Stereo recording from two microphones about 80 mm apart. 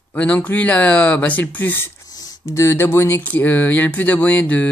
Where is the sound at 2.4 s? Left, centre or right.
Left.